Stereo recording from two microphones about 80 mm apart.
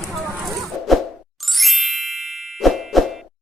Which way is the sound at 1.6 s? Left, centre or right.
Centre.